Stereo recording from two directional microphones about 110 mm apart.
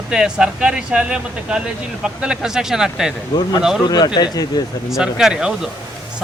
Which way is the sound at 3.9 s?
40° left (ahead or behind).